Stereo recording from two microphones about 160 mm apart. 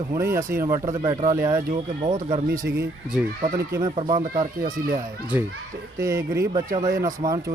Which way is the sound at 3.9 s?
35° right (ahead or behind).